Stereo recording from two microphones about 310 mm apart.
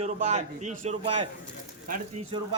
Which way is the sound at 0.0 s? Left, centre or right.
Right.